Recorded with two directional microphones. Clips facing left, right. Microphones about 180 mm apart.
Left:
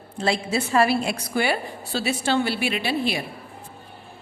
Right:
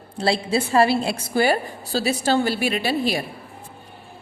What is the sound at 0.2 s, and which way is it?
A woman's voice, 30° right (ahead or behind).